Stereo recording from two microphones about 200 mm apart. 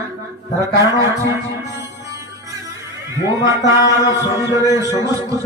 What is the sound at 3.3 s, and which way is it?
Speech, 15° right (ahead or behind).